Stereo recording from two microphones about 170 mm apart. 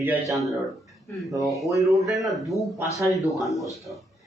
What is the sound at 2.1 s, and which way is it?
A man's voice, centre (ahead or behind).